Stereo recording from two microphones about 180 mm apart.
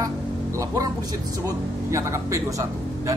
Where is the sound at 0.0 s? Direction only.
20° right (ahead or behind).